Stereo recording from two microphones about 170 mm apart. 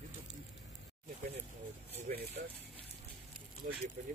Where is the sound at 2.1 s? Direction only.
55° right (ahead or behind).